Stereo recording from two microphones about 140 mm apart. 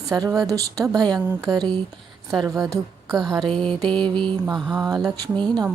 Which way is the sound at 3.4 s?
Centre (ahead or behind).